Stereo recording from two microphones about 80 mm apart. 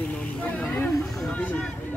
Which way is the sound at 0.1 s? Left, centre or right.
Centre.